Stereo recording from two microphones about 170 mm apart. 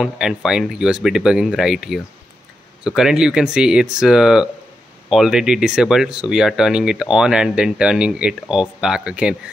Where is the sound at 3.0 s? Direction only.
5° right (ahead or behind).